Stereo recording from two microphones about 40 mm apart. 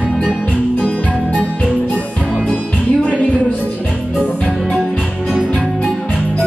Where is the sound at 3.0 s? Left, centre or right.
Left.